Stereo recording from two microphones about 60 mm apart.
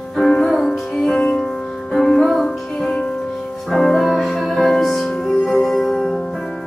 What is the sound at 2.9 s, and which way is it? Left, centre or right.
Music, centre.